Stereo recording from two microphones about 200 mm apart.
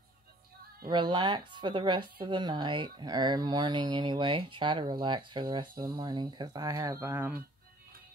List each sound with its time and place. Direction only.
0.8 s speech: 20° right (ahead or behind)